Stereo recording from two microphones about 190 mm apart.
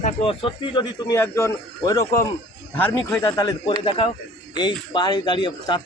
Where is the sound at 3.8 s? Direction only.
30° left (ahead or behind).